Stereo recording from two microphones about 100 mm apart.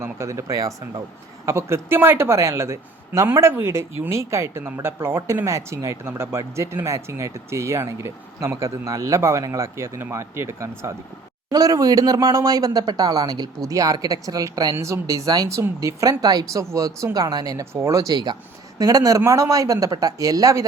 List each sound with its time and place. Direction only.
0.0 s speech: 30° right (ahead or behind)
11.5 s speech: 40° right (ahead or behind)